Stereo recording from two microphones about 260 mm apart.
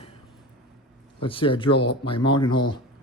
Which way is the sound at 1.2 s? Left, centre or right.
Centre.